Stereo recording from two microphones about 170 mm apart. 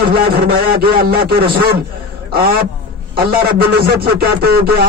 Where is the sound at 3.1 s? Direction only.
60° right (ahead or behind).